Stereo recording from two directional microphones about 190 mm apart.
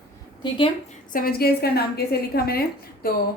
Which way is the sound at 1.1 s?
50° left (ahead or behind).